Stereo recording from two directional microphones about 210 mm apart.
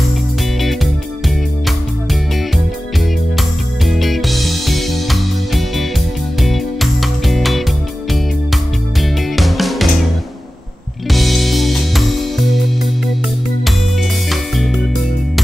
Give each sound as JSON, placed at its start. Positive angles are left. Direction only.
{"t": 3.3, "sound": "music", "side_deg": 0}
{"t": 9.0, "sound": "music", "side_deg": 0}
{"t": 11.1, "sound": "music", "side_deg": 0}
{"t": 14.3, "sound": "music", "side_deg": 0}